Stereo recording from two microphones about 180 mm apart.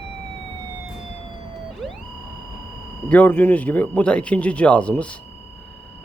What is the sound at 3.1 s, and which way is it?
Speech, 10° left (ahead or behind).